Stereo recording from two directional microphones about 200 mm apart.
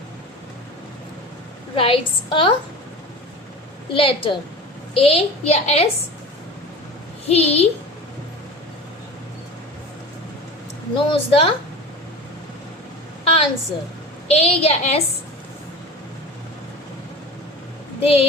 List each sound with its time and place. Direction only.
1.7 s a woman's voice: 25° left (ahead or behind)
3.9 s a woman's voice: 25° left (ahead or behind)
7.3 s a child's voice: 30° left (ahead or behind)
10.9 s a woman's voice: 25° left (ahead or behind)
13.2 s a sound: 30° left (ahead or behind)
14.3 s a child's voice: 30° left (ahead or behind)
18.0 s a woman's voice: 30° left (ahead or behind)